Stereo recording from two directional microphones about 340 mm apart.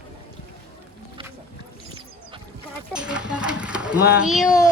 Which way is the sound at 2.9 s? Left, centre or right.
Centre.